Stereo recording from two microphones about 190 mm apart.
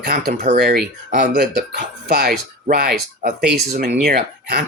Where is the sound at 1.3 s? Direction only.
60° right (ahead or behind).